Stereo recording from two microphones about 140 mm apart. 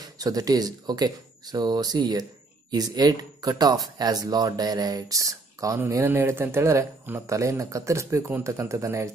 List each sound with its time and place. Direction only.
0.2 s speech: 25° right (ahead or behind)